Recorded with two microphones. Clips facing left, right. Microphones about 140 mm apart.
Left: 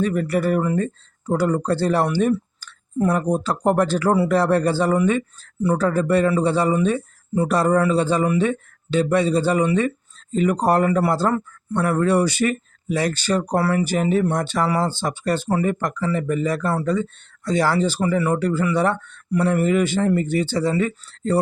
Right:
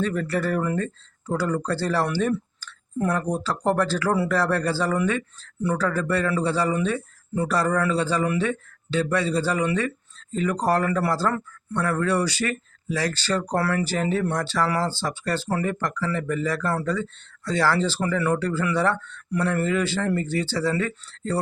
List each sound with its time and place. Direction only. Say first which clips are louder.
0.0 s speech: left 4 dB; 15° left (ahead or behind)